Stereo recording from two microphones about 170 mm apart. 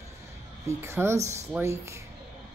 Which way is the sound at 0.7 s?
15° right (ahead or behind).